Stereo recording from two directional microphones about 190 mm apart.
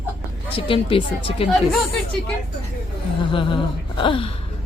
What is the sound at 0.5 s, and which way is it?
Speech, 30° left (ahead or behind).